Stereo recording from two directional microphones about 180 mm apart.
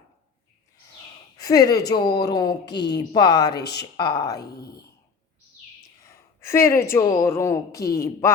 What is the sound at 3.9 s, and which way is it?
Speech, 20° left (ahead or behind).